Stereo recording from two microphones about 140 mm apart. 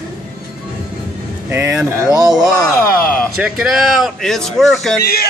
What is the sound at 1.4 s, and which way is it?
Speech, 15° right (ahead or behind).